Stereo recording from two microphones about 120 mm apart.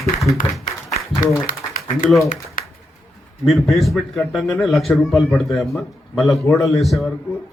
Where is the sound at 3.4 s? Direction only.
Centre (ahead or behind).